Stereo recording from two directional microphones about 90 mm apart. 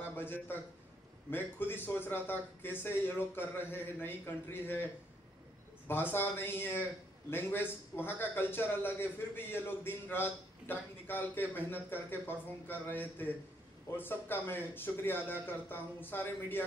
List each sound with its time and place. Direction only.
0.0 s a man's voice: 25° left (ahead or behind)
5.9 s a man's voice: 25° left (ahead or behind)